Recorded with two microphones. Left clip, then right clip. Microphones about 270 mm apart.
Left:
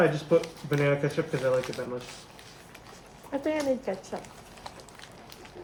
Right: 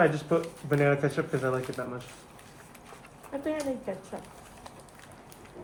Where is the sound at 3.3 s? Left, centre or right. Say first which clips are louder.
Left 4 dB; left.